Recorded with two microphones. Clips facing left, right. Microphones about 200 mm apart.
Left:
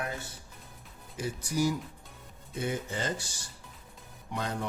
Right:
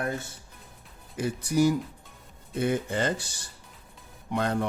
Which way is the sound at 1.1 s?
60° right (ahead or behind).